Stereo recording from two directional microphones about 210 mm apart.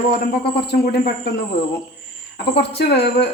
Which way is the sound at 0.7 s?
50° left (ahead or behind).